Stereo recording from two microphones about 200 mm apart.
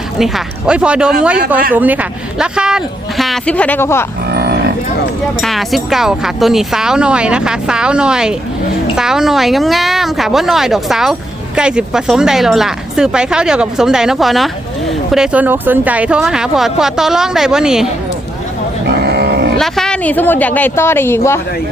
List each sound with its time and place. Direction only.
0.2 s speech: 5° right (ahead or behind)
4.3 s livestock: 55° right (ahead or behind)
5.4 s speech: centre (ahead or behind)
19.0 s music: 55° right (ahead or behind)
19.5 s speech: centre (ahead or behind)